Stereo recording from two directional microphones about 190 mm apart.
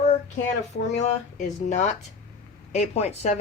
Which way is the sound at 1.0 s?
40° left (ahead or behind).